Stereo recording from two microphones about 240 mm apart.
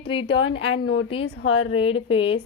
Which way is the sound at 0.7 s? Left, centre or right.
Left.